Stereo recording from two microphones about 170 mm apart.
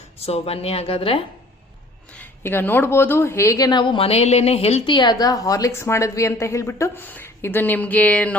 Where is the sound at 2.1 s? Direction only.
10° left (ahead or behind).